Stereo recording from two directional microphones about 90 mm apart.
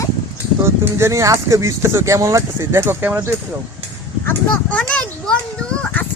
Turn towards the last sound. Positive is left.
turn(degrees=10)  # may be behind; listen again after turning